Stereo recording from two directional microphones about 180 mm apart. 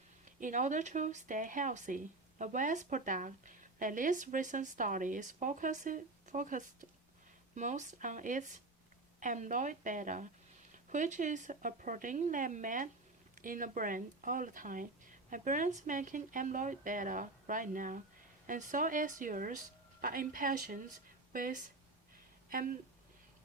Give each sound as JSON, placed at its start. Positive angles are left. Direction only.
{"t": 0.3, "sound": "speech", "side_deg": -45}